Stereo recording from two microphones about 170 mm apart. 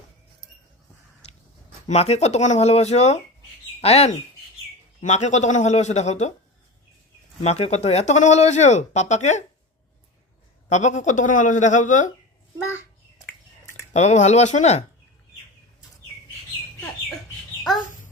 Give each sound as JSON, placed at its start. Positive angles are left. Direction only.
{"t": 1.9, "sound": "speech", "side_deg": 40}
{"t": 7.4, "sound": "speech", "side_deg": 40}
{"t": 10.7, "sound": "speech", "side_deg": 45}
{"t": 13.9, "sound": "speech", "side_deg": 40}